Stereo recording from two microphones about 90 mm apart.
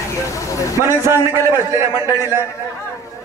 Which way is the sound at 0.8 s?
30° right (ahead or behind).